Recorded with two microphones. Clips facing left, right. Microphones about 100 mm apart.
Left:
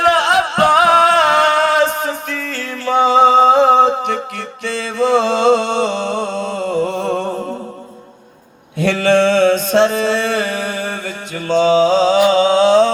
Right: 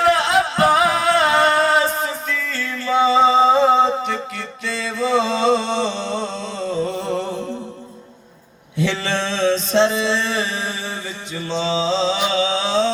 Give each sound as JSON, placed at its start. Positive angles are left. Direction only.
{"t": 0.0, "sound": "music", "side_deg": 65}
{"t": 8.8, "sound": "mantra", "side_deg": 55}
{"t": 11.4, "sound": "music", "side_deg": 55}
{"t": 12.3, "sound": "a sound", "side_deg": 50}